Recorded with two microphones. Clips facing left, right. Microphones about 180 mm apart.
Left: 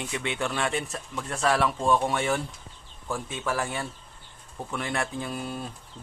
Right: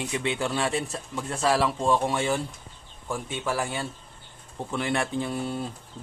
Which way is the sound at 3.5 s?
30° right (ahead or behind).